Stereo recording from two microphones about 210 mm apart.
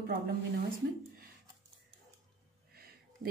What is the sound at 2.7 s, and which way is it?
Music, 45° right (ahead or behind).